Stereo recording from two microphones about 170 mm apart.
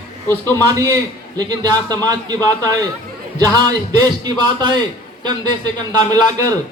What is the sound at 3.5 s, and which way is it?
A man's voice, 25° right (ahead or behind).